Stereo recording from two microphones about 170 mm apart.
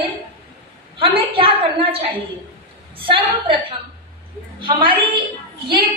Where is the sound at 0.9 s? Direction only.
35° right (ahead or behind).